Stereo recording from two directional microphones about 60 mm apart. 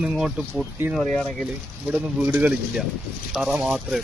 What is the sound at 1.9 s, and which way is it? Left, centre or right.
Speech, right.